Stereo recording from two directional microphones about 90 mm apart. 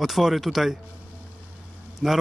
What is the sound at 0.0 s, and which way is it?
Speech, centre (ahead or behind).